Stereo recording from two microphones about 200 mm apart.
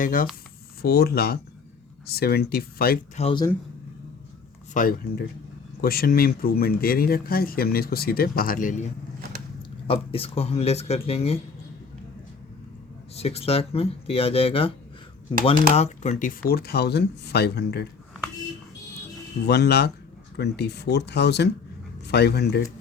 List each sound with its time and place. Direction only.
0.0 s speech: 45° left (ahead or behind)
3.2 s speech: 30° left (ahead or behind)
4.7 s speech: 45° left (ahead or behind)
9.8 s speech: 30° left (ahead or behind)
13.1 s speech: 30° left (ahead or behind)
15.7 s speech: 35° left (ahead or behind); by 17.8 s 55° left (ahead or behind)
19.5 s speech: 55° left (ahead or behind)